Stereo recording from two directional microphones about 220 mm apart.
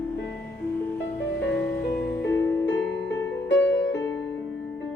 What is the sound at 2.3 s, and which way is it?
Music, 10° left (ahead or behind).